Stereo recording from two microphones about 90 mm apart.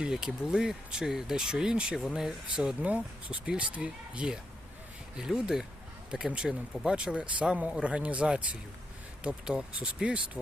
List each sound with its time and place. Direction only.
0.0 s speech: 10° right (ahead or behind)